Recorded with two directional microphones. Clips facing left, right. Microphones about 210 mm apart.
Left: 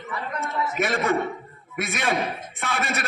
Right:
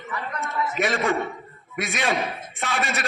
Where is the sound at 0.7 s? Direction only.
55° left (ahead or behind).